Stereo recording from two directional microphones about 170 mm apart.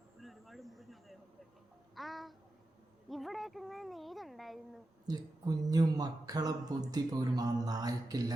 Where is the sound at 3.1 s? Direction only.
Centre (ahead or behind).